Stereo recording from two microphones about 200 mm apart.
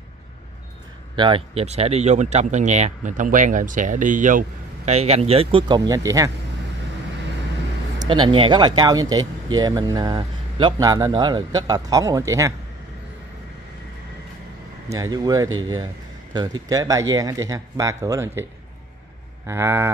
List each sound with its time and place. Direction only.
1.1 s speech: 25° right (ahead or behind)
8.0 s speech: 25° right (ahead or behind)
14.9 s speech: 15° right (ahead or behind)
19.4 s speech: 10° right (ahead or behind)